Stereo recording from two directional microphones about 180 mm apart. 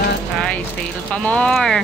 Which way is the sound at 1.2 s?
5° left (ahead or behind).